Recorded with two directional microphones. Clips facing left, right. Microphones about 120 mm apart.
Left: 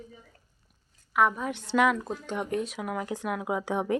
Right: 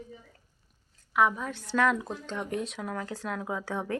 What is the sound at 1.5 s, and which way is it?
Speech, 20° left (ahead or behind).